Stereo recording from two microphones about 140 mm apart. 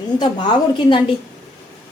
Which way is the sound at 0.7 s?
35° left (ahead or behind).